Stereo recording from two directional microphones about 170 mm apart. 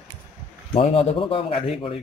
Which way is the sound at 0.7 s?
30° left (ahead or behind).